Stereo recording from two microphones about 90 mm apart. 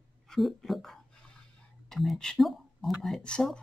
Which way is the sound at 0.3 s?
Centre (ahead or behind).